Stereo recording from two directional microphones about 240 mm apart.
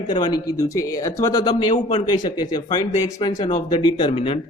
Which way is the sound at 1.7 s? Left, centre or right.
Left.